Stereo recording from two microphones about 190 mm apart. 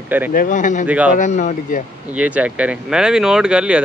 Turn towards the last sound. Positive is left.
turn(degrees=-5)  # may be behind; listen again after turning